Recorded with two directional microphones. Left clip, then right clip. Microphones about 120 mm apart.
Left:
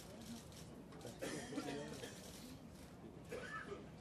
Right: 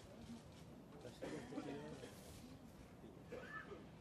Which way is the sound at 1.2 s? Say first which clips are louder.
Left 3 dB; 45° left (ahead or behind).